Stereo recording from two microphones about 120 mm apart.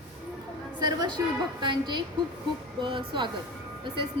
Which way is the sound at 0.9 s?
35° right (ahead or behind).